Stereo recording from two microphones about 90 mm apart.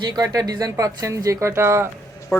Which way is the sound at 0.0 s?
50° right (ahead or behind).